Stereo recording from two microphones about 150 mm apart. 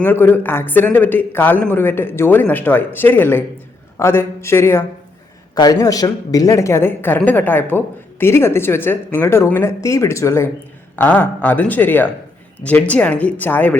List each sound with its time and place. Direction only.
0.0 s a woman's voice: 15° left (ahead or behind)